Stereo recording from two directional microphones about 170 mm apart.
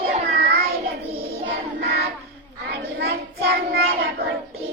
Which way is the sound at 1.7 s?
70° right (ahead or behind).